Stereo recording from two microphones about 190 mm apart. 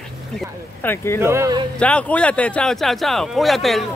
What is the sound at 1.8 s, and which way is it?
Speech, 5° left (ahead or behind).